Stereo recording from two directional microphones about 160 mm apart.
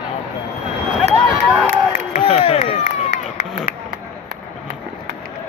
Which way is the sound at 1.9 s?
50° left (ahead or behind).